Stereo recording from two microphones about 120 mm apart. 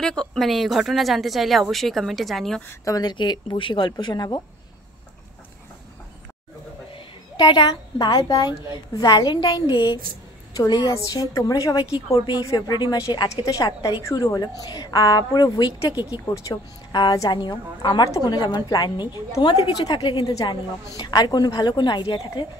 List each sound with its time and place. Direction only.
0.0 s a woman's voice: 5° left (ahead or behind)
2.8 s a woman's voice: 30° left (ahead or behind)
7.3 s a woman's voice: 40° left (ahead or behind)
15.9 s speech: 10° right (ahead or behind)
16.4 s a woman's voice: 35° left (ahead or behind)